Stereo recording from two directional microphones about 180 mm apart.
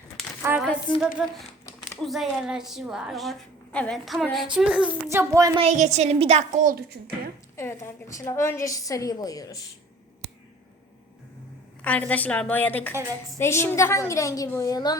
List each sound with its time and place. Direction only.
0.6 s speech: centre (ahead or behind)
5.0 s a child's voice: 15° right (ahead or behind)
5.5 s a woman's voice: 40° right (ahead or behind)
7.5 s a woman's voice: 15° left (ahead or behind)
11.8 s a woman's voice: 10° left (ahead or behind)